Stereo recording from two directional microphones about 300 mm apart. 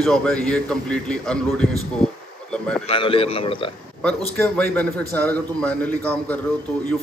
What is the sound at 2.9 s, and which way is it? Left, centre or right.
Speech, centre.